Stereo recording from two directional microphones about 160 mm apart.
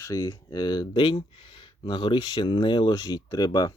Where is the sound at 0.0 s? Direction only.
20° left (ahead or behind).